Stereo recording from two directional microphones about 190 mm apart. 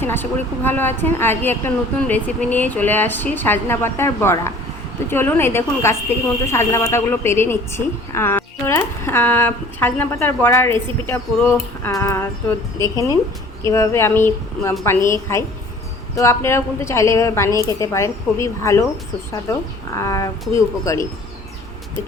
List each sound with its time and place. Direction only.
0.0 s a woman's voice: 10° left (ahead or behind)